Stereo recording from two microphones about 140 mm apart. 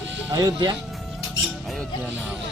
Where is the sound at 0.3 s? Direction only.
30° right (ahead or behind).